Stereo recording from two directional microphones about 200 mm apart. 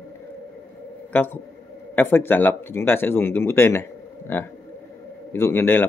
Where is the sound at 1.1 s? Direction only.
10° left (ahead or behind).